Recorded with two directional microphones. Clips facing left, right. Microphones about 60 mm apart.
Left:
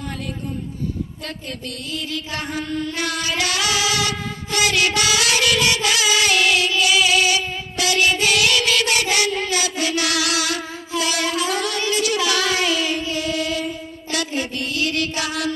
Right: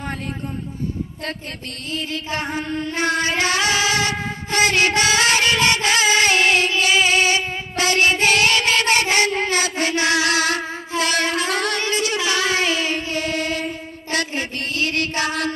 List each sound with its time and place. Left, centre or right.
1.9 s music: right